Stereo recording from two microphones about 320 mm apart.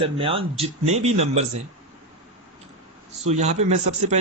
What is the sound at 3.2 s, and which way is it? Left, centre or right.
Speech, right.